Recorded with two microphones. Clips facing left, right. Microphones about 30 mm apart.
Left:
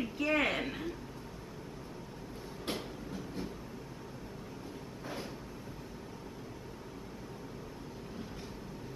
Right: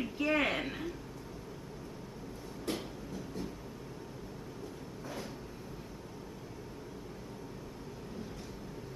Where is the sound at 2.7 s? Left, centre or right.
Left.